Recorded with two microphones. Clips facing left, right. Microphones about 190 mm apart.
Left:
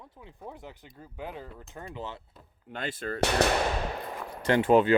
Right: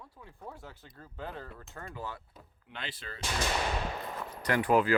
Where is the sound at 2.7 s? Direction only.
50° left (ahead or behind); by 3.5 s 65° left (ahead or behind).